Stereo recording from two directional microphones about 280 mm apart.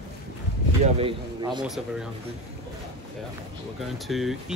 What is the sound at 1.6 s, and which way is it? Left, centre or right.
Speech, centre.